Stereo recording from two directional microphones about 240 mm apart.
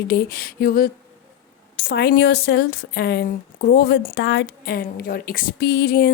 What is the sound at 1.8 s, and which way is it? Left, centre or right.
A woman's voice, left.